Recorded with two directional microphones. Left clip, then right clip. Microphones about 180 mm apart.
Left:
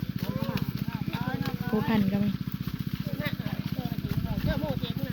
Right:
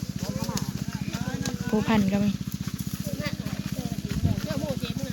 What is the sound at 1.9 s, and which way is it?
Speech, 5° right (ahead or behind).